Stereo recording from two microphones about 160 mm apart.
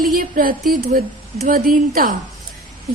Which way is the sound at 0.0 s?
65° right (ahead or behind).